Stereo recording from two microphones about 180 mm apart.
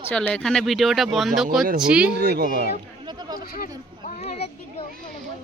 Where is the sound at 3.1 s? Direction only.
25° right (ahead or behind).